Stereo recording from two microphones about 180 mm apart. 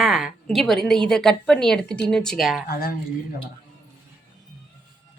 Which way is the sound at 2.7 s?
55° left (ahead or behind).